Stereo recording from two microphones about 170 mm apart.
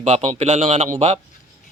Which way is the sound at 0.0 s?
40° right (ahead or behind).